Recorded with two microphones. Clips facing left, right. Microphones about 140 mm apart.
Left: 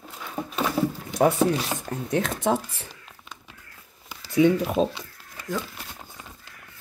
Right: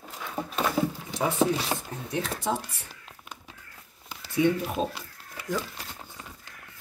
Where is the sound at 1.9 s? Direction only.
60° left (ahead or behind).